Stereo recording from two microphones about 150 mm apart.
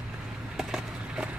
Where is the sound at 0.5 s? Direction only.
5° right (ahead or behind).